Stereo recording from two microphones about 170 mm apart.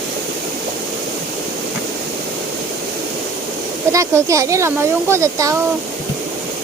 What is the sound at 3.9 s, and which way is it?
Speech, 20° right (ahead or behind).